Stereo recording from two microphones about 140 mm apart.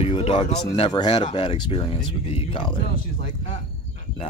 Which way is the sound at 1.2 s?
45° left (ahead or behind).